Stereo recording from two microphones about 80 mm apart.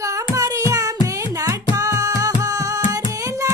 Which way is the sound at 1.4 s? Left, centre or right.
Right.